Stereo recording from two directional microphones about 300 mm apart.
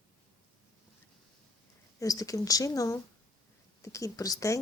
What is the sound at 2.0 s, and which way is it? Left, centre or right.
Speech, centre.